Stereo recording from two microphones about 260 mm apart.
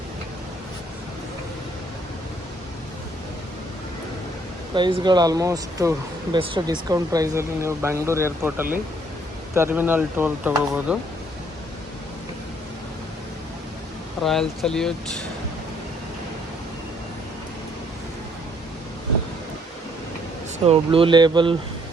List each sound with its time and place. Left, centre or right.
4.7 s speech: centre
14.2 s speech: centre
20.7 s speech: right